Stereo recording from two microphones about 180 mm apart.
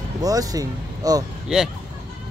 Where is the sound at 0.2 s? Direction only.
20° right (ahead or behind).